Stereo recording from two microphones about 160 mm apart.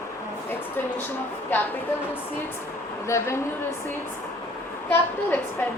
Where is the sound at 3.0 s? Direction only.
15° left (ahead or behind).